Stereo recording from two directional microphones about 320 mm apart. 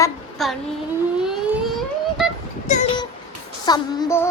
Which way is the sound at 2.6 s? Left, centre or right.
Left.